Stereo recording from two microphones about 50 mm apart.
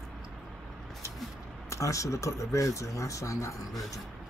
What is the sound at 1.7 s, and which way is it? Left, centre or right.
Speech, left.